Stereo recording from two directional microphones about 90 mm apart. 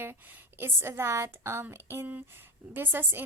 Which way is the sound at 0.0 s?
20° right (ahead or behind).